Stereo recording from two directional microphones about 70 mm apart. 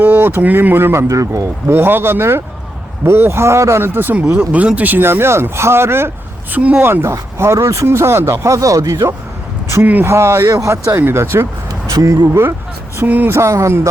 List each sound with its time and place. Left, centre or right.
0.0 s speech: right
1.0 s speech: right
1.6 s speech: right
4.3 s speech: right
6.5 s speech: right
6.8 s speech: right
9.8 s speech: right
10.1 s speech: right
10.5 s speech: right
11.0 s speech: right
11.7 s speech: right
13.0 s speech: right
13.3 s speech: right